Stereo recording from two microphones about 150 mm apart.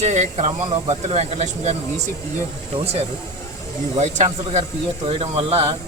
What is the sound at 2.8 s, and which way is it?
Speech, 45° right (ahead or behind).